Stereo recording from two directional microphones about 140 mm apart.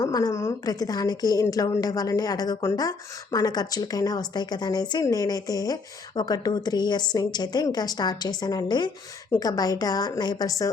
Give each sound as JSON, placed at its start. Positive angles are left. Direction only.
{"t": 0.0, "sound": "speech", "side_deg": 25}